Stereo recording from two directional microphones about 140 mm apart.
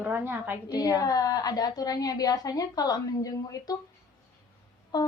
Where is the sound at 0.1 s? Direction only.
15° right (ahead or behind).